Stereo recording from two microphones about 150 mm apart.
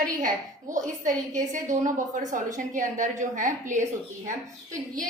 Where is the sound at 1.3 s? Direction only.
55° right (ahead or behind).